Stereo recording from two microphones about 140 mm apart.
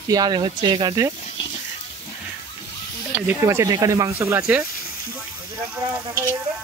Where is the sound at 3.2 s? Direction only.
20° right (ahead or behind).